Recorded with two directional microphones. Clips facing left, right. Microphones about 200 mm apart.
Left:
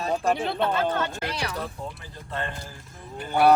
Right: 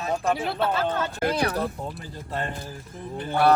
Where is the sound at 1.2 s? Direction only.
50° right (ahead or behind).